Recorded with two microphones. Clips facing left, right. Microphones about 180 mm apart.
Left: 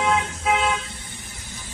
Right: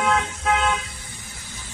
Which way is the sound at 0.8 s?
25° left (ahead or behind).